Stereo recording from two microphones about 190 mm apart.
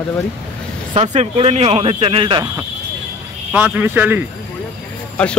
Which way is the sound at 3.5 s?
10° right (ahead or behind).